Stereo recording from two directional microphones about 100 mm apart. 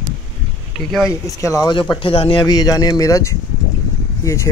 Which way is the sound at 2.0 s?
70° left (ahead or behind).